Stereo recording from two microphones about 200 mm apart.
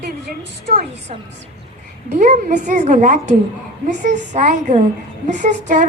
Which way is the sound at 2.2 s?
40° right (ahead or behind).